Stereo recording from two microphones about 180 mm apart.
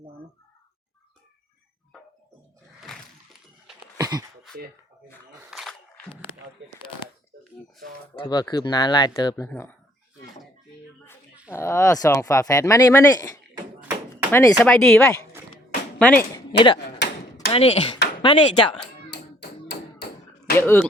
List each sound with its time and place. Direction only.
3.9 s a sound: 20° right (ahead or behind)
5.5 s a sound: centre (ahead or behind)
6.6 s speech: 90° right
8.1 s speech: 25° left (ahead or behind); by 9.7 s 10° left (ahead or behind)
11.5 s speech: 15° left (ahead or behind)
16.3 s speech: 25° left (ahead or behind)
19.1 s tap: 65° left (ahead or behind)
20.6 s speech: 15° left (ahead or behind)